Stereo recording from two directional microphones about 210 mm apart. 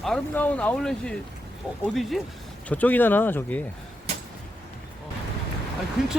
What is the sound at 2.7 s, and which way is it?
Speech, 10° left (ahead or behind).